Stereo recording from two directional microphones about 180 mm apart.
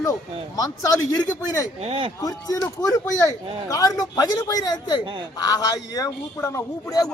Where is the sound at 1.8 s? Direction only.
30° right (ahead or behind).